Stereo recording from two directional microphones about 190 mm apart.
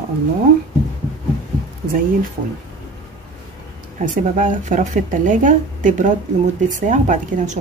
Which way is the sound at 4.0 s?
45° right (ahead or behind).